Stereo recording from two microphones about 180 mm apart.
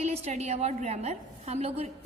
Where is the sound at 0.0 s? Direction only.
40° right (ahead or behind).